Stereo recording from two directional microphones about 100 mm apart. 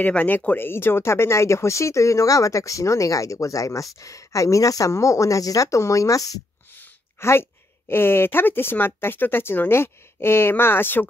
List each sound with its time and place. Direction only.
0.0 s speech: 15° left (ahead or behind); by 6.4 s 35° left (ahead or behind)
6.8 s a sound: 25° left (ahead or behind)
7.9 s speech: 20° left (ahead or behind)